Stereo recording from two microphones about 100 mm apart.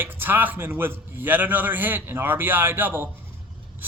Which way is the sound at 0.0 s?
20° right (ahead or behind).